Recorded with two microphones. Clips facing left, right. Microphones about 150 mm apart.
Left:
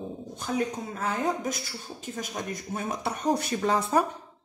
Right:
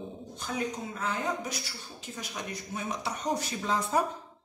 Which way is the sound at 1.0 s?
50° left (ahead or behind).